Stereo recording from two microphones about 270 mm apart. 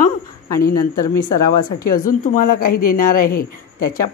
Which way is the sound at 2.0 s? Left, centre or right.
Left.